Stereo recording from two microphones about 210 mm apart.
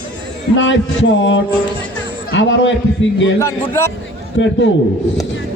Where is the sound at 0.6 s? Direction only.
60° left (ahead or behind).